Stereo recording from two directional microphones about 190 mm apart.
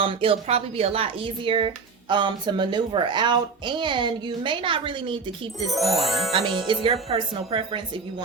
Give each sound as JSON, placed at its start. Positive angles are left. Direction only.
{"t": 0.0, "sound": "speech", "side_deg": -30}
{"t": 5.5, "sound": "speech", "side_deg": 0}
{"t": 6.3, "sound": "speech", "side_deg": -30}